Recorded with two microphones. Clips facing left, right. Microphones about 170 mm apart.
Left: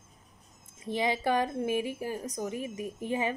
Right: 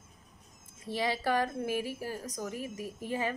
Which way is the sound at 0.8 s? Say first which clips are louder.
Left 3 dB; 20° left (ahead or behind).